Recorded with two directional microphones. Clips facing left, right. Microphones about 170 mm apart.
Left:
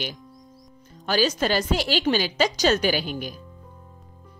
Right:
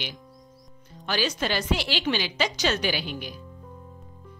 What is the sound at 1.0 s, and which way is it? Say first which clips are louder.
A woman's voice: left 5 dB; 40° left (ahead or behind).